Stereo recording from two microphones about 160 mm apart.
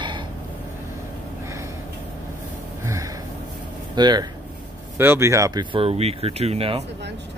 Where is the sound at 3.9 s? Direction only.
25° right (ahead or behind).